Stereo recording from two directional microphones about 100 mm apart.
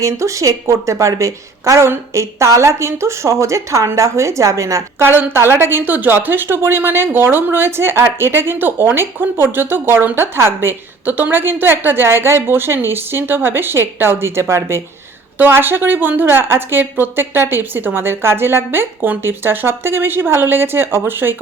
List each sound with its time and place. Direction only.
0.0 s a woman's voice: 30° right (ahead or behind)